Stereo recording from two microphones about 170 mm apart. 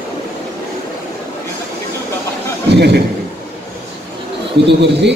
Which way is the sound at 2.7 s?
75° right (ahead or behind).